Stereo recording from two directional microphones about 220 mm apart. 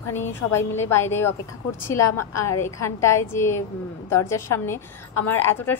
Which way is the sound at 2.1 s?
90° left.